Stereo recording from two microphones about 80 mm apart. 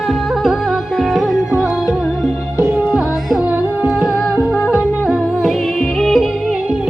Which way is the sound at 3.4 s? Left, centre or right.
Right.